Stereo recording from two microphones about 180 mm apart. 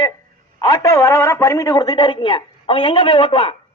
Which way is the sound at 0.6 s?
20° left (ahead or behind).